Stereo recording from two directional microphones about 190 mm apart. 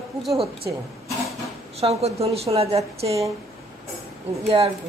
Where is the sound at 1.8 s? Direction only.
35° right (ahead or behind).